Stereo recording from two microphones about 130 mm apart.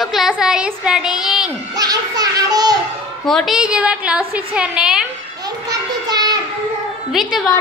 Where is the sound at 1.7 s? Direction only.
30° right (ahead or behind).